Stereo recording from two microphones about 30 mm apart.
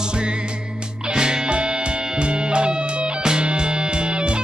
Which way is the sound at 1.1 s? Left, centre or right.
Right.